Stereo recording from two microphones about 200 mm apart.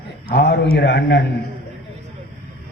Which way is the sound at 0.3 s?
55° left (ahead or behind).